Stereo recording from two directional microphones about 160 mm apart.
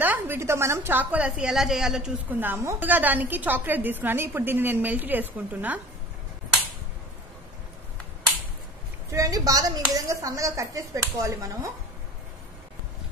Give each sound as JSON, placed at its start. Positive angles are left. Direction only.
{"t": 0.0, "sound": "a woman's voice", "side_deg": -10}
{"t": 9.1, "sound": "a woman's voice", "side_deg": -20}